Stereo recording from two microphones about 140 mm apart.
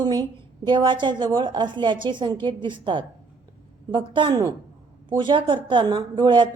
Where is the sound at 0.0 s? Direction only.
30° right (ahead or behind).